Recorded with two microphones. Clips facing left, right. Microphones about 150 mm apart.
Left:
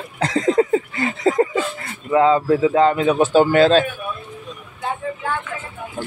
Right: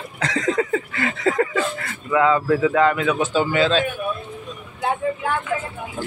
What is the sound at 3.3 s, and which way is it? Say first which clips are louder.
Speech: left 7 dB; 50° left (ahead or behind).